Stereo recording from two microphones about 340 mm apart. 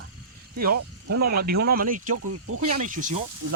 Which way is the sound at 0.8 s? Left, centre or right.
Right.